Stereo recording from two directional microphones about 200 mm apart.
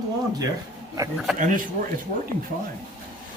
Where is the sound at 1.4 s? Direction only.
40° right (ahead or behind).